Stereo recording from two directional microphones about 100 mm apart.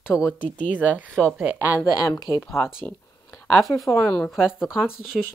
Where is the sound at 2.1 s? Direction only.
35° left (ahead or behind).